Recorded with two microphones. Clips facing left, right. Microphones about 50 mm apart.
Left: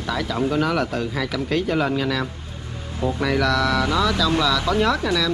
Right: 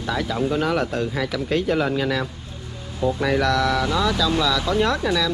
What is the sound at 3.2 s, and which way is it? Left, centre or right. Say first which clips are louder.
Speech: left 1 dB; centre.